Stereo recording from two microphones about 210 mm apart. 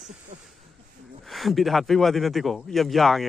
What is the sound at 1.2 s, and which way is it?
Speech, centre (ahead or behind).